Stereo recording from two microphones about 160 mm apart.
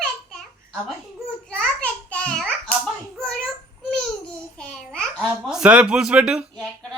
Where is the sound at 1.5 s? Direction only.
5° left (ahead or behind).